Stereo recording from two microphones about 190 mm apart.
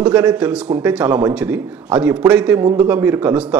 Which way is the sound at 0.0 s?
5° right (ahead or behind).